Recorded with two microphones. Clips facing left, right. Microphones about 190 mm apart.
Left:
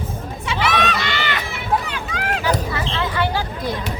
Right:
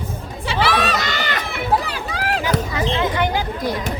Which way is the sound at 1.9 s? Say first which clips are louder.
Right 1 dB; 35° right (ahead or behind).